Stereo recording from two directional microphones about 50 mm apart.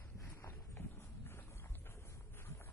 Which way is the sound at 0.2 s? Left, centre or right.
Left.